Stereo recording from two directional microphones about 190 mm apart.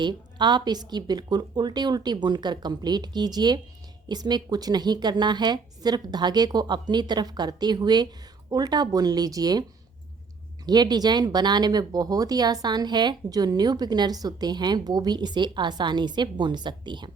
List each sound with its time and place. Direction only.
0.0 s speech: 25° right (ahead or behind)
10.7 s speech: 20° right (ahead or behind)